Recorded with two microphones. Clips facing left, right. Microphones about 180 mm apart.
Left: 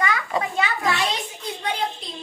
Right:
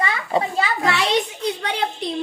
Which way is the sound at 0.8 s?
75° right (ahead or behind).